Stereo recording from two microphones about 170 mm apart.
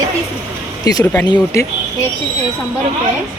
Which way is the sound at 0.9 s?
20° left (ahead or behind).